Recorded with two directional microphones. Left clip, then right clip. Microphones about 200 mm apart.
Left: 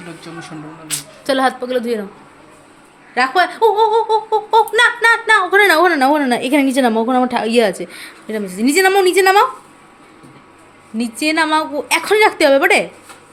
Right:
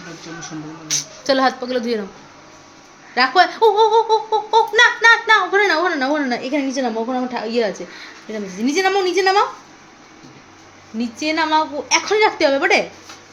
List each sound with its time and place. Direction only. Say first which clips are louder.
1.3 s a child's voice: left 1 dB; 10° left (ahead or behind)
3.2 s a child's voice: even; 5° left (ahead or behind)
5.5 s a woman's voice: left 5 dB; 30° left (ahead or behind)
10.9 s a woman's voice: left 4 dB; 25° left (ahead or behind)